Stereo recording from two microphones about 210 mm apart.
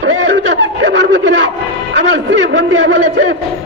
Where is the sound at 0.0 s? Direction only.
60° right (ahead or behind).